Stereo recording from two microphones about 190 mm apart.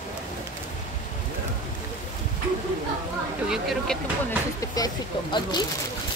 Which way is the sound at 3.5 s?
Centre (ahead or behind).